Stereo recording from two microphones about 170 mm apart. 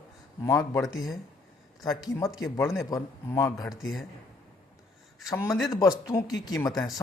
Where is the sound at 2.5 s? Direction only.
15° left (ahead or behind).